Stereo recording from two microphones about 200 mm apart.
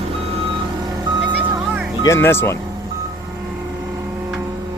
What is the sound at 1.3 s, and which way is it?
Music, 10° right (ahead or behind).